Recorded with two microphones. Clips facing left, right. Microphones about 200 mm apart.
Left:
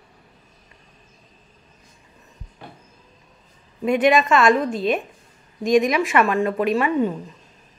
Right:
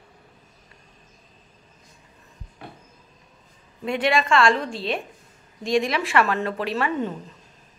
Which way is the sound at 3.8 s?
25° right (ahead or behind).